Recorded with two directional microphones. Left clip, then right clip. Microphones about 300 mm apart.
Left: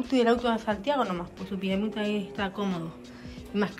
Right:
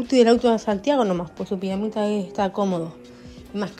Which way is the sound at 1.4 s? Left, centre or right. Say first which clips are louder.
Right 2 dB; centre.